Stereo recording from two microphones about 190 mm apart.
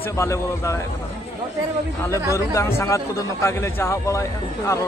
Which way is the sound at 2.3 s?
15° left (ahead or behind).